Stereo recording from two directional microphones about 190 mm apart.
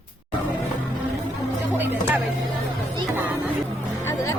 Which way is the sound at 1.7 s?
10° right (ahead or behind).